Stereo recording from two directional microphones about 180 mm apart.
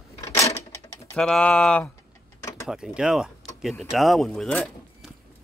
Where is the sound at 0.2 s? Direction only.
15° left (ahead or behind).